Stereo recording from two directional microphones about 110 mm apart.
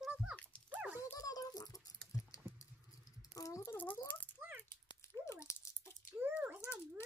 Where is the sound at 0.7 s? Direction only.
15° right (ahead or behind).